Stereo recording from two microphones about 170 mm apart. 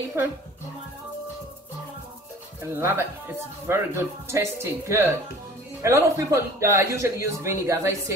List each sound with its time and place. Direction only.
2.7 s speech: 15° right (ahead or behind)